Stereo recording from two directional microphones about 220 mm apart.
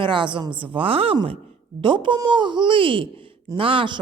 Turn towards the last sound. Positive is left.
turn(degrees=-20)  # may be behind; listen again after turning